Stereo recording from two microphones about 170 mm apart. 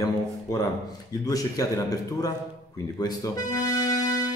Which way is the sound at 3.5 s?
20° left (ahead or behind).